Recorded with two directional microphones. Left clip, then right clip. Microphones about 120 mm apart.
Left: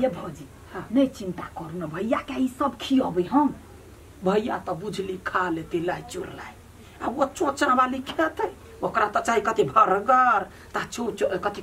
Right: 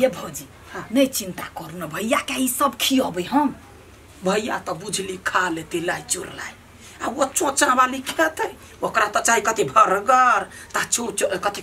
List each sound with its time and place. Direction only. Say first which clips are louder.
0.9 s speech: right 4 dB; 20° right (ahead or behind)
4.2 s a woman's voice: right 2 dB; centre (ahead or behind)